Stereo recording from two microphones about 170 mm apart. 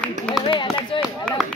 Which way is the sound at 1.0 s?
Centre (ahead or behind).